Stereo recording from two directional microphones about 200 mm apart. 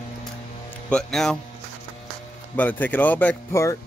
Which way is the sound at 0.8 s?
5° left (ahead or behind).